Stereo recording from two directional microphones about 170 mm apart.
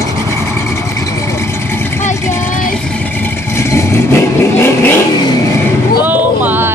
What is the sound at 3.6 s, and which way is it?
Vehicle, 15° left (ahead or behind).